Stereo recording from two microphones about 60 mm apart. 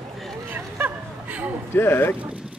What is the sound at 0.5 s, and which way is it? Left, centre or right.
Hubbub, right.